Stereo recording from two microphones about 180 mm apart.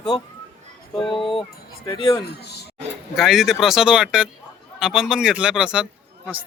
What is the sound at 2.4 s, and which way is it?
Speech, 65° left (ahead or behind).